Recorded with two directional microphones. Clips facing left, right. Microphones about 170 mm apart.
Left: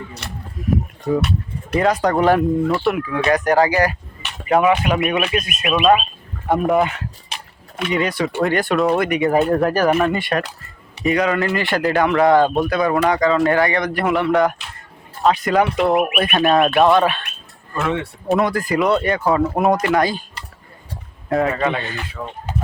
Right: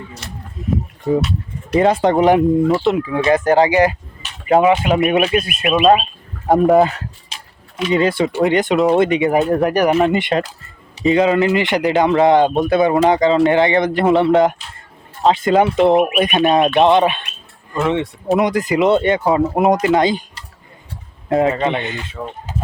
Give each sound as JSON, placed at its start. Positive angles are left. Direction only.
{"t": 0.2, "sound": "speech", "side_deg": 65}
{"t": 0.6, "sound": "speech", "side_deg": -25}
{"t": 7.3, "sound": "a sound", "side_deg": 60}
{"t": 7.9, "sound": "speech", "side_deg": -30}
{"t": 21.2, "sound": "speech", "side_deg": -20}
{"t": 22.5, "sound": "a sound", "side_deg": 60}